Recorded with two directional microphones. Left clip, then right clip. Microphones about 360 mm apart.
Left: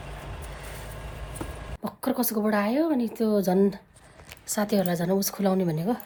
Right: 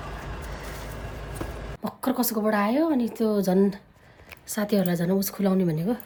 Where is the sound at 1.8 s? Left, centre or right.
Centre.